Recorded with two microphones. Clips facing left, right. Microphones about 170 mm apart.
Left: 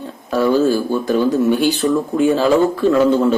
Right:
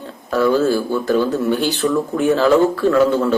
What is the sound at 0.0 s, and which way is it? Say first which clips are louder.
Speech: even; 15° left (ahead or behind).